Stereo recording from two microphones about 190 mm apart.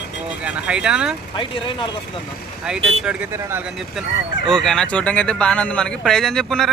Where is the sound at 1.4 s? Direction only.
25° left (ahead or behind).